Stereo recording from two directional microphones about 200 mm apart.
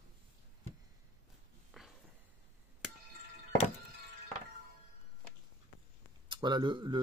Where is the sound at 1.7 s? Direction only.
Centre (ahead or behind).